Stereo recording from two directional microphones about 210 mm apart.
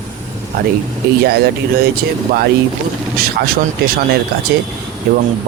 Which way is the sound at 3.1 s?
45° right (ahead or behind).